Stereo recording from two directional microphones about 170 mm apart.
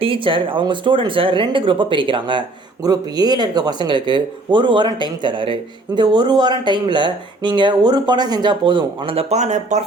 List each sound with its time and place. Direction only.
0.0 s speech: 30° right (ahead or behind)